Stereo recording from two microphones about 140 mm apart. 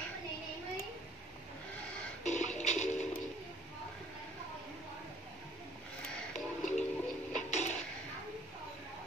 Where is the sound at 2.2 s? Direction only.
55° left (ahead or behind).